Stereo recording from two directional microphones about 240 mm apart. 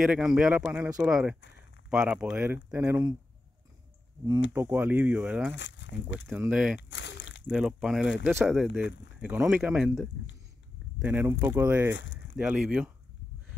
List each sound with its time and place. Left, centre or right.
0.0 s speech: centre
4.6 s speech: centre
5.5 s speech: left
6.1 s speech: centre
6.8 s a sound: left
7.4 s speech: centre
8.8 s speech: left
9.2 s speech: centre
11.9 s speech: left
12.4 s speech: centre